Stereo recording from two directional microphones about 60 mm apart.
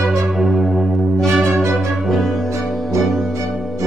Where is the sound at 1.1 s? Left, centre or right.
Right.